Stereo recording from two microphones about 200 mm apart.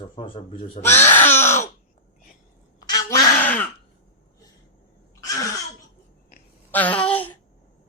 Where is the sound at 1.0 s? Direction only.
10° left (ahead or behind).